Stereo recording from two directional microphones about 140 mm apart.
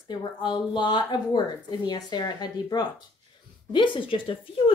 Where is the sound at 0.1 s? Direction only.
35° left (ahead or behind).